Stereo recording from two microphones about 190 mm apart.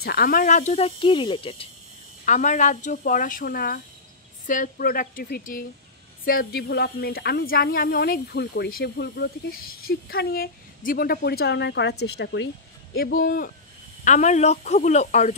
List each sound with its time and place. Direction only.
0.0 s speech: 55° left (ahead or behind); by 1.7 s 25° left (ahead or behind)
2.2 s a woman's voice: 40° left (ahead or behind); by 12.4 s 65° left (ahead or behind)
12.9 s speech: 55° left (ahead or behind)